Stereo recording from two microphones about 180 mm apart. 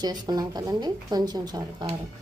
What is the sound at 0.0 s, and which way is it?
Speech, 25° right (ahead or behind).